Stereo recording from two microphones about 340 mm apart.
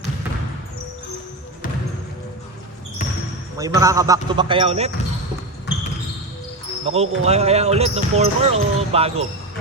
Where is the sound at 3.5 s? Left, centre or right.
Centre.